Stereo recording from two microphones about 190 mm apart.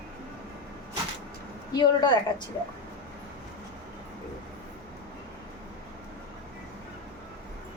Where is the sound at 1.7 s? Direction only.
25° left (ahead or behind).